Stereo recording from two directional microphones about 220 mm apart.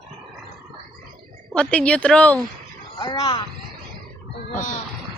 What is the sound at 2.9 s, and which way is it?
Speech, 20° left (ahead or behind).